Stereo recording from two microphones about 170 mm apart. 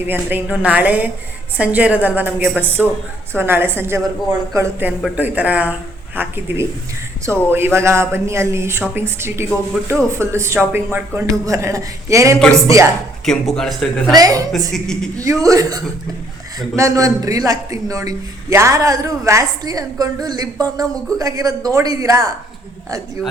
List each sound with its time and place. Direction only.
0.1 s a man's voice: 10° right (ahead or behind)
13.2 s speech: 5° left (ahead or behind)
14.2 s a man's voice: 20° right (ahead or behind)
14.7 s speech: 5° left (ahead or behind)
15.2 s a man's voice: 20° right (ahead or behind)